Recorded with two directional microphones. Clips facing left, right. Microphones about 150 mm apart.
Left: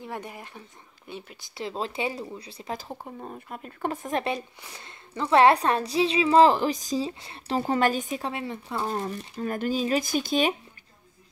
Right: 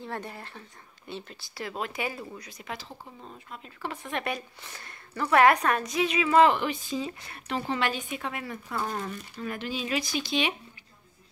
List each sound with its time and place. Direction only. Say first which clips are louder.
0.0 s a woman's voice: even; 15° left (ahead or behind); by 2.9 s 35° left (ahead or behind)
3.0 s speech: left 7 dB; 50° left (ahead or behind)
4.6 s a woman's voice: left 1 dB; 20° left (ahead or behind); by 7.1 s 40° left (ahead or behind)
7.1 s speech: left 4 dB; 25° left (ahead or behind)
9.4 s speech: left 7 dB; 45° left (ahead or behind)